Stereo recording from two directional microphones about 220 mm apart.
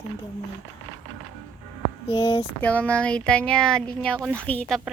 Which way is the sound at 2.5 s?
5° left (ahead or behind).